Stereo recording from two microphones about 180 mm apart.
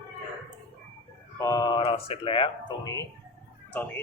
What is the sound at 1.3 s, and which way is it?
Speech, 20° left (ahead or behind).